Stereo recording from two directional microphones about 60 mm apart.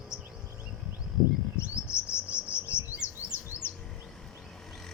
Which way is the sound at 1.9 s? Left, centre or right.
Centre.